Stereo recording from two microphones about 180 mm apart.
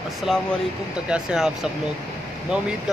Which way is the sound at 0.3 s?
Centre (ahead or behind).